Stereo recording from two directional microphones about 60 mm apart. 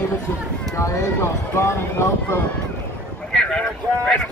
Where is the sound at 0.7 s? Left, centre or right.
Left.